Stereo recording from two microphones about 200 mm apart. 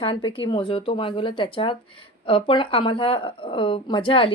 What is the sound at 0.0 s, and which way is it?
Speech, 25° left (ahead or behind).